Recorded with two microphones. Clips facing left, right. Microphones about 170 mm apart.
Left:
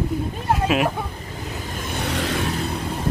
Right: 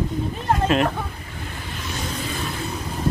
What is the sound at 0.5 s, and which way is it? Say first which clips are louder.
Speech: right 1 dB; 5° left (ahead or behind).